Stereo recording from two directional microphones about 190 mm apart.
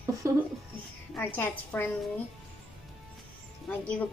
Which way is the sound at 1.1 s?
10° left (ahead or behind).